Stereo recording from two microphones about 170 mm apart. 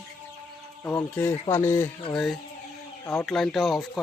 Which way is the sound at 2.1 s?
Centre (ahead or behind).